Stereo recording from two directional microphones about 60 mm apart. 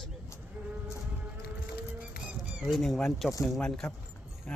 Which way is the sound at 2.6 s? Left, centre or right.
Centre.